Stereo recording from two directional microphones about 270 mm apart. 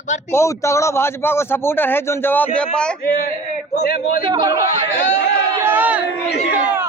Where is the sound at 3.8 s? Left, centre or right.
Left.